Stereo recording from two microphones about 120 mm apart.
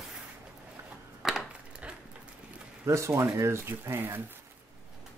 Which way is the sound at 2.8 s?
25° right (ahead or behind).